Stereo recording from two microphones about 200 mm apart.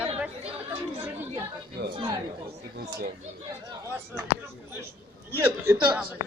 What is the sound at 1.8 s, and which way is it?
Speech, 55° right (ahead or behind).